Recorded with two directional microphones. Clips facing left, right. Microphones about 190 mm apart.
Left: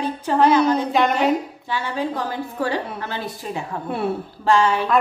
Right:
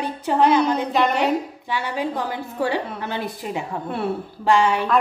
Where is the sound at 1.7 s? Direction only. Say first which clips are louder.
Left 1 dB; 15° right (ahead or behind).